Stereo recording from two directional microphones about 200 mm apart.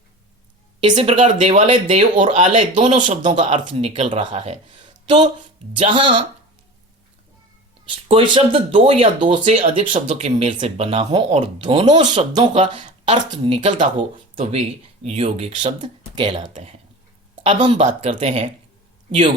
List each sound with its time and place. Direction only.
0.8 s speech: 25° right (ahead or behind)
2.1 s speech: 40° right (ahead or behind)
7.9 s speech: 25° right (ahead or behind)
17.4 s speech: 25° right (ahead or behind)